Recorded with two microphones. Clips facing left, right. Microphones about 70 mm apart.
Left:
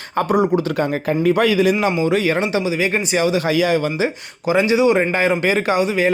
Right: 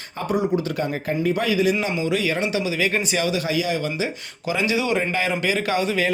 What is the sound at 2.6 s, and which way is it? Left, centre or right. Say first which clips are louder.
Speech: left 3 dB; left.